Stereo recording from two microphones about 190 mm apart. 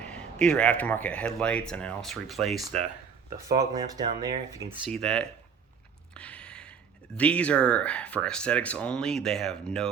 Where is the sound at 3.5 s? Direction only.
20° right (ahead or behind).